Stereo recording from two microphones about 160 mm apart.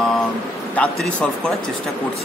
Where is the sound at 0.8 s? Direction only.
10° left (ahead or behind).